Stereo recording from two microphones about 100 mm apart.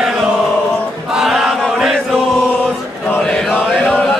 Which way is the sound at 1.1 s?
5° right (ahead or behind).